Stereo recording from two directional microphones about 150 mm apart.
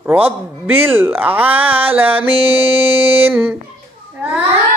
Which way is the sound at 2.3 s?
40° right (ahead or behind).